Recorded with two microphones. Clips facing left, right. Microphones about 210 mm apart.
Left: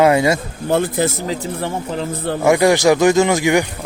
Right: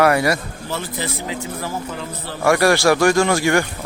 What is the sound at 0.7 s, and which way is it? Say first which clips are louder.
Speech: left 10 dB; 50° left (ahead or behind).